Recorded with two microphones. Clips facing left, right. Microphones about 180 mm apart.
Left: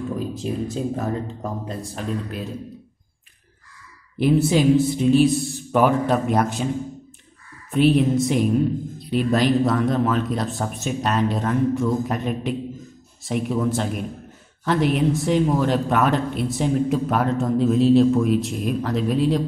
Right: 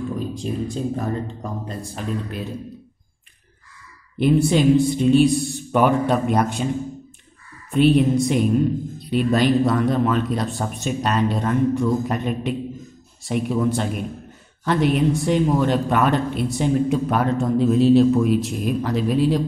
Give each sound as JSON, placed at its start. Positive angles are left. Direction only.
{"t": 0.2, "sound": "speech", "side_deg": 5}
{"t": 4.2, "sound": "speech", "side_deg": 5}
{"t": 7.7, "sound": "speech", "side_deg": 0}